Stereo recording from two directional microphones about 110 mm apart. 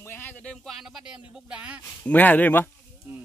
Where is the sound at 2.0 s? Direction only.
15° left (ahead or behind).